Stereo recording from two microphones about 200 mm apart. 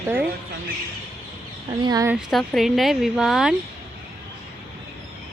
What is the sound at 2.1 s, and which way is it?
Speech, centre (ahead or behind).